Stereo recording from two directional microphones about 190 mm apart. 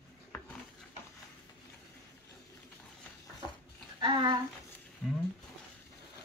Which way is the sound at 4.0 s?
25° right (ahead or behind).